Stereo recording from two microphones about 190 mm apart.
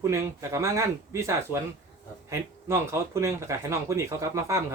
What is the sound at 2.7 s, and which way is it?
Speech, 15° right (ahead or behind).